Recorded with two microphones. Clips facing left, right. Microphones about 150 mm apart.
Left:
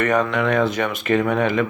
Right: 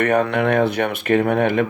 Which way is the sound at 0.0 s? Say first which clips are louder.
Right 2 dB; 55° right (ahead or behind).